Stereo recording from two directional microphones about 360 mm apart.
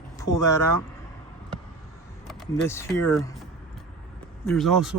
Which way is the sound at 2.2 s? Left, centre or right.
Centre.